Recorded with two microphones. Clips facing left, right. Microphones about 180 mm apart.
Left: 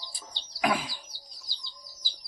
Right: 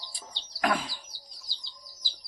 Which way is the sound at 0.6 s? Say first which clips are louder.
Even; 5° left (ahead or behind).